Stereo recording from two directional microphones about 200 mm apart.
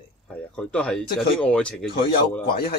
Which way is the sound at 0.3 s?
5° left (ahead or behind).